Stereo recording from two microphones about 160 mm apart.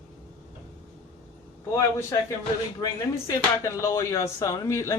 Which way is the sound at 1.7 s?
20° left (ahead or behind).